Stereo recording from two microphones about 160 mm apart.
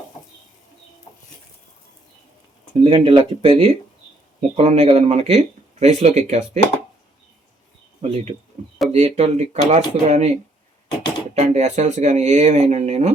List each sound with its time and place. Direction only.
2.8 s speech: 35° right (ahead or behind)
8.0 s speech: 35° right (ahead or behind)
11.3 s speech: 45° right (ahead or behind)